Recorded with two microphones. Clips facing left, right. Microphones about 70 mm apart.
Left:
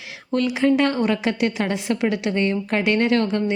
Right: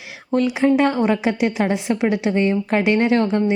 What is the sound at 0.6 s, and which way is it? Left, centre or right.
Speech, centre.